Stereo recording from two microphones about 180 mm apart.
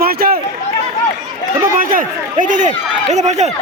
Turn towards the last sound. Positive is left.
turn(degrees=-40)  # may be behind; listen again after turning